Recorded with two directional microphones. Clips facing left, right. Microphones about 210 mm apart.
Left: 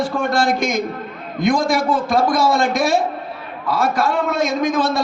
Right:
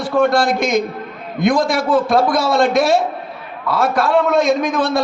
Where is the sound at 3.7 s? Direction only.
55° right (ahead or behind).